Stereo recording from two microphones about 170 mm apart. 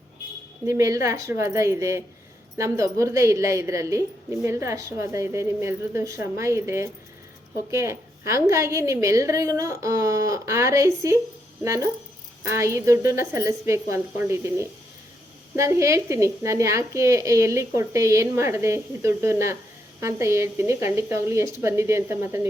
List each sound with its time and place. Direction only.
0.6 s a woman's voice: 15° right (ahead or behind)